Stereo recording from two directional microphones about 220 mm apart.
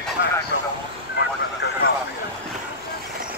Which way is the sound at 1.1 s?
50° left (ahead or behind).